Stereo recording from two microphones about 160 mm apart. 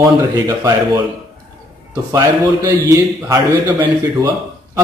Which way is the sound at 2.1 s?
15° right (ahead or behind).